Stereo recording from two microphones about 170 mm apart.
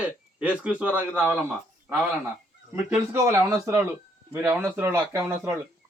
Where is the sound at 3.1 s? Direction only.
15° right (ahead or behind).